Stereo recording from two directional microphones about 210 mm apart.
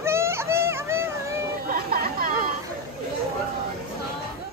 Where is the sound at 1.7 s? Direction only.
45° right (ahead or behind).